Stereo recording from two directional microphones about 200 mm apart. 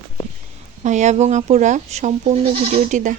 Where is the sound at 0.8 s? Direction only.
35° right (ahead or behind).